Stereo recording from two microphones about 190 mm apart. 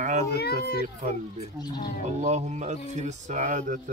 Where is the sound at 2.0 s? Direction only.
35° right (ahead or behind).